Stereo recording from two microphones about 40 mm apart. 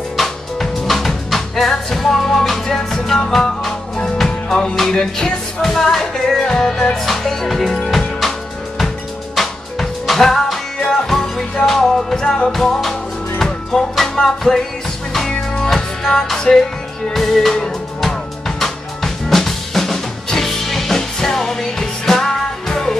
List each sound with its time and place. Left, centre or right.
0.2 s music: centre
15.6 s music: centre
17.1 s music: centre
18.6 s drum: centre
22.3 s music: centre